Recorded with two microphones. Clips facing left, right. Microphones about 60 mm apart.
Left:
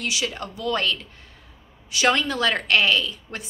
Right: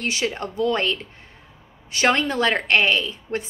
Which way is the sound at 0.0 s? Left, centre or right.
Right.